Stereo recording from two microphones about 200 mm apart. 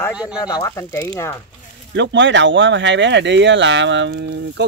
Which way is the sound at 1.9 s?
65° right (ahead or behind).